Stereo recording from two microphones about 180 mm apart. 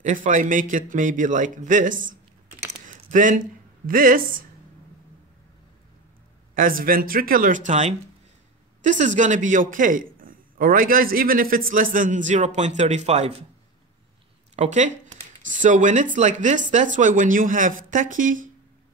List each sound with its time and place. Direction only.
0.0 s a man's voice: 45° right (ahead or behind)
2.8 s a sound: 45° right (ahead or behind)
6.5 s a man's voice: 50° right (ahead or behind)
14.5 s a man's voice: 40° right (ahead or behind)